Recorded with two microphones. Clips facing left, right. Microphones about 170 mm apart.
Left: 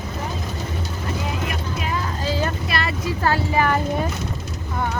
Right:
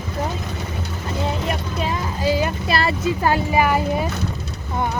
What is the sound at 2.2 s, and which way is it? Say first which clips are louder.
Speech: right 5 dB; 15° right (ahead or behind).